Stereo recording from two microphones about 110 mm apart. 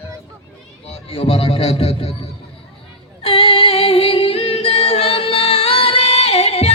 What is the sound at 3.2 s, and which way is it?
Music, 55° left (ahead or behind).